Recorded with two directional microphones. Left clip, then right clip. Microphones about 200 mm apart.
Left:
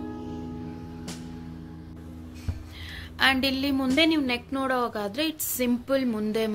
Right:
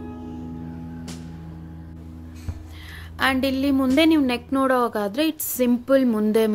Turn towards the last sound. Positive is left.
turn(degrees=-30)  # may be behind; listen again after turning